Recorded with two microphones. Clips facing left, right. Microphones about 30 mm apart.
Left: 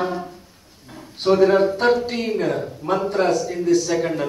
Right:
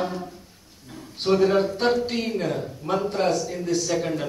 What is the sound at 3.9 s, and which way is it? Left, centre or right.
Speech, centre.